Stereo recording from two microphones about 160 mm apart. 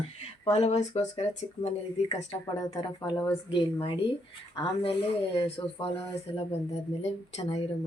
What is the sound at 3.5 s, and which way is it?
A woman's voice, 35° left (ahead or behind).